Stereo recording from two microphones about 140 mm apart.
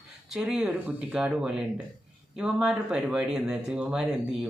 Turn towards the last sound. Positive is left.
turn(degrees=-5)  # may be behind; listen again after turning